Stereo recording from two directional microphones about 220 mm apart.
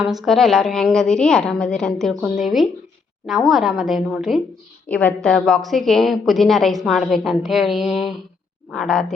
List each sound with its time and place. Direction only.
0.0 s a woman's voice: centre (ahead or behind)